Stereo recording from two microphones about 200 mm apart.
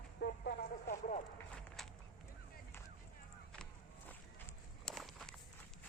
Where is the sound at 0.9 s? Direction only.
40° left (ahead or behind).